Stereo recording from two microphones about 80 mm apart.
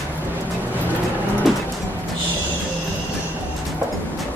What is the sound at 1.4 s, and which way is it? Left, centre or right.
Music, centre.